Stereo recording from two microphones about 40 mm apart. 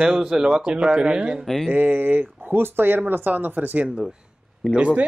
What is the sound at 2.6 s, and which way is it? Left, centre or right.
Speech, right.